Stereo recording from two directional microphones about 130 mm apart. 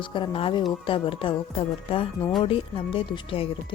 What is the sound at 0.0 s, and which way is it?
Speech, 40° left (ahead or behind).